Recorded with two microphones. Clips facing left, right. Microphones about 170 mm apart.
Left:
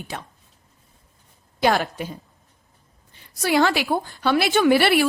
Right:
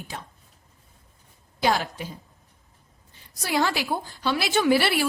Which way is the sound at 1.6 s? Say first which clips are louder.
Left 4 dB; 60° left (ahead or behind).